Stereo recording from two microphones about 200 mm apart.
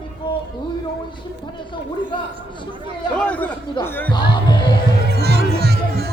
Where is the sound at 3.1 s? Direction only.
5° left (ahead or behind).